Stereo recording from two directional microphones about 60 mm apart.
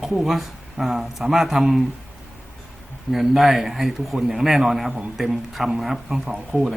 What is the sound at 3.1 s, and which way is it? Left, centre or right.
A man's voice, centre.